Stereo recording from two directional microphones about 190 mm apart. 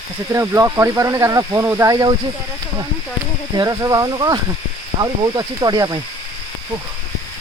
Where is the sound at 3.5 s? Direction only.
20° right (ahead or behind).